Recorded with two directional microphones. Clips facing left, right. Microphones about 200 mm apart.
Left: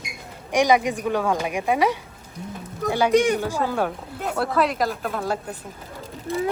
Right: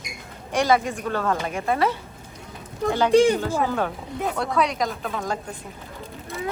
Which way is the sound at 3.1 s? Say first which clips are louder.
Right 3 dB; 30° right (ahead or behind).